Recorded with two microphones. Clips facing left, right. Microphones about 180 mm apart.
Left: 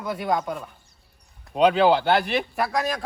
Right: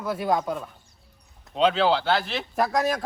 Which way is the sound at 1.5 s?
15° left (ahead or behind).